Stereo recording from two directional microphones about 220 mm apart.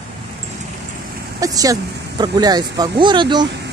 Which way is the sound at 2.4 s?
20° right (ahead or behind).